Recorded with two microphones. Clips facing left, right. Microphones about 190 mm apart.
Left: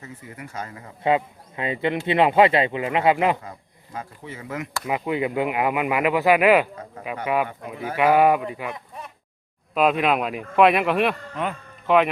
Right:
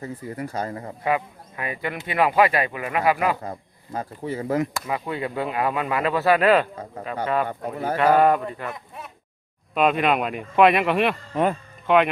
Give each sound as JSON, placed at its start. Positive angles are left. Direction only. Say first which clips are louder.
{"t": 0.0, "sound": "speech", "louder": "right 8 dB", "side_deg": -35}
{"t": 1.0, "sound": "speech", "louder": "left 3 dB", "side_deg": 25}
{"t": 3.9, "sound": "speech", "louder": "right 7 dB", "side_deg": -35}
{"t": 4.9, "sound": "speech", "louder": "left 3 dB", "side_deg": 15}
{"t": 7.4, "sound": "speech", "louder": "right 4 dB", "side_deg": -40}
{"t": 7.9, "sound": "speech", "louder": "left 1 dB", "side_deg": 10}
{"t": 9.7, "sound": "speech", "louder": "even", "side_deg": 0}